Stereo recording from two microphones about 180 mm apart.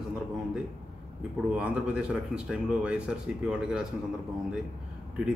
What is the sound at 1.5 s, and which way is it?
Speech, 5° right (ahead or behind).